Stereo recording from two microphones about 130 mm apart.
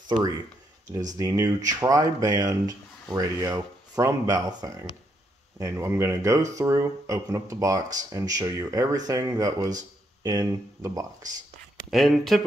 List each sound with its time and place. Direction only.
1.1 s speech: 25° right (ahead or behind)
11.9 s speech: centre (ahead or behind)